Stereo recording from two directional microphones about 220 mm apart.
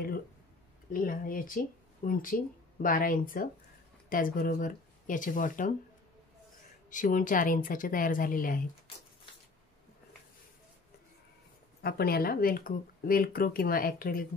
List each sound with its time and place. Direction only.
0.9 s speech: 40° left (ahead or behind)
6.9 s speech: 35° left (ahead or behind)
11.8 s speech: 45° left (ahead or behind)